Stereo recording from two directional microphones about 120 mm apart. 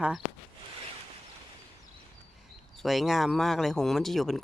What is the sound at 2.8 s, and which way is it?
Speech, centre (ahead or behind).